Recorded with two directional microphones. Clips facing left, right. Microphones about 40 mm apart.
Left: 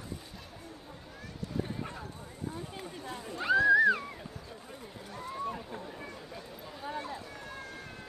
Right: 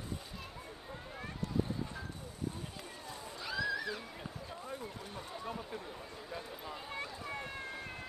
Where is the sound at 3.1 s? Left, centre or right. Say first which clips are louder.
Left 14 dB; left.